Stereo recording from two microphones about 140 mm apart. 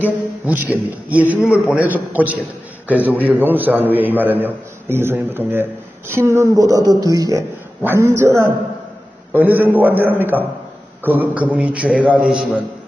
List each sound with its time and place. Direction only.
0.0 s a man's voice: 15° right (ahead or behind)